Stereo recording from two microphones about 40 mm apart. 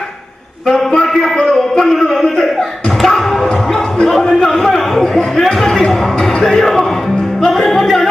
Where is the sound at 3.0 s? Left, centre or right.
Centre.